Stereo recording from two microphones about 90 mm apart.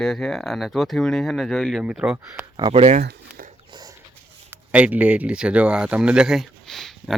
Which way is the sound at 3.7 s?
50° right (ahead or behind).